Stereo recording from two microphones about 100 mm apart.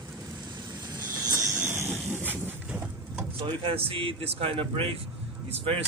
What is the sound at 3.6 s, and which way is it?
A man's voice, 65° right (ahead or behind).